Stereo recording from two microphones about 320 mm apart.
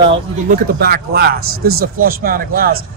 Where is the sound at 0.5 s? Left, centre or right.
Right.